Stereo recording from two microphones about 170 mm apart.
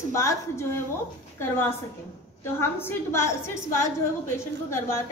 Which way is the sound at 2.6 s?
15° left (ahead or behind).